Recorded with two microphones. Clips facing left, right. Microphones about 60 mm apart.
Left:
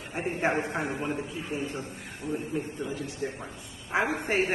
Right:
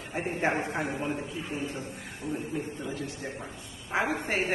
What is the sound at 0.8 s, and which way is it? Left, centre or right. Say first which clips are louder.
Speech: even; centre.